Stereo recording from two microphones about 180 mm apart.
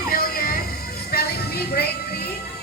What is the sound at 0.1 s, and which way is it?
Music, 55° left (ahead or behind).